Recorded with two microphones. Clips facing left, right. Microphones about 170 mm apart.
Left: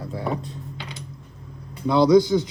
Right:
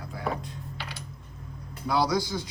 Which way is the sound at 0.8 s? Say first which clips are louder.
Left 2 dB; 20° left (ahead or behind).